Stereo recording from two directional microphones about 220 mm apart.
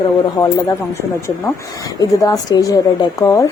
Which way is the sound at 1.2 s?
15° left (ahead or behind).